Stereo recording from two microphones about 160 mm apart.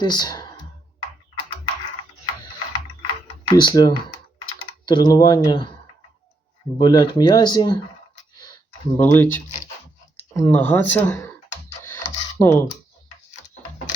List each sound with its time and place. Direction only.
0.0 s speech: 25° left (ahead or behind)
3.4 s speech: 25° left (ahead or behind)
6.7 s speech: 30° left (ahead or behind)
9.0 s speech: 15° left (ahead or behind)
11.8 s computer keyboard: 15° left (ahead or behind)